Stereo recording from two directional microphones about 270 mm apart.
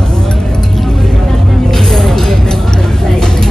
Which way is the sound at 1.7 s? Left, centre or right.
Centre.